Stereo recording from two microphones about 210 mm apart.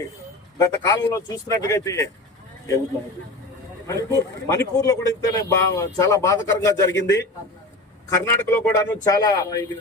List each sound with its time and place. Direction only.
0.6 s a man's voice: 15° left (ahead or behind)
3.8 s a man's voice: 15° left (ahead or behind)